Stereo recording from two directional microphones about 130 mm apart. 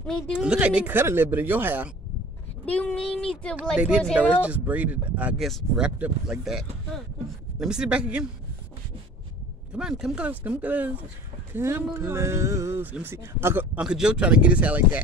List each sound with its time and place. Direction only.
0.4 s speech: 10° right (ahead or behind)
2.6 s speech: 10° left (ahead or behind)
3.7 s speech: 10° right (ahead or behind)
9.8 s speech: 5° right (ahead or behind)
13.7 s speech: 5° right (ahead or behind)